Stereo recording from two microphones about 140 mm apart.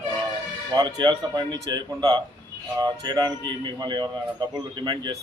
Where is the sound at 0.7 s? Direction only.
30° right (ahead or behind).